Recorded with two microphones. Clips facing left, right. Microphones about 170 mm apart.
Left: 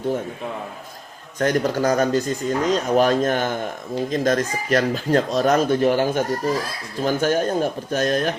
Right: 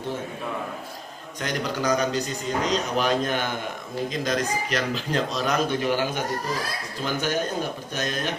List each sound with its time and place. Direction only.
1.4 s a man's voice: 45° left (ahead or behind)